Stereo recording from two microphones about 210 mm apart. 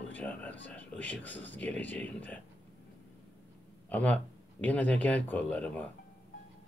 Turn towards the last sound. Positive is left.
turn(degrees=5)  # may be behind; listen again after turning